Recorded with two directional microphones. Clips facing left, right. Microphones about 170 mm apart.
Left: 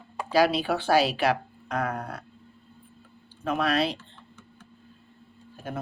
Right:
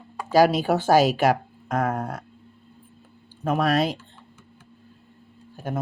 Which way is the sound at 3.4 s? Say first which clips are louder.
Right 3 dB; 45° right (ahead or behind).